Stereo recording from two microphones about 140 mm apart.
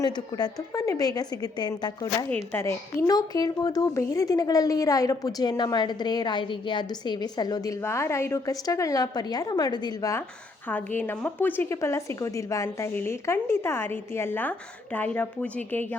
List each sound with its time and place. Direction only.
0.0 s speech: 30° left (ahead or behind)
2.3 s speech: 15° left (ahead or behind)
10.7 s a woman's voice: 10° left (ahead or behind)